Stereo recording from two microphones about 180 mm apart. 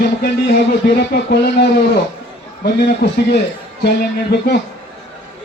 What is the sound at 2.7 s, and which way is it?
Speech, 65° left (ahead or behind).